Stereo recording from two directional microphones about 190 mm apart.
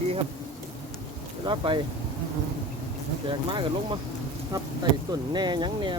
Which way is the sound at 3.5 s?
25° right (ahead or behind).